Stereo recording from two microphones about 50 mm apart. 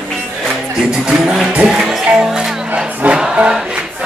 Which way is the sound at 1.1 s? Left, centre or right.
Centre.